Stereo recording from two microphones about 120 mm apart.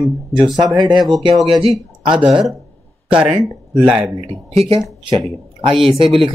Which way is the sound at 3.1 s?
10° right (ahead or behind).